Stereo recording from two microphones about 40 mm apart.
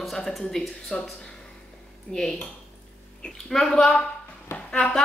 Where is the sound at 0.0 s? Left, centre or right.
Centre.